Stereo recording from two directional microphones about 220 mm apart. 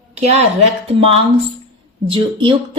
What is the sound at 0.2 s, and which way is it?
A woman's voice, 30° right (ahead or behind).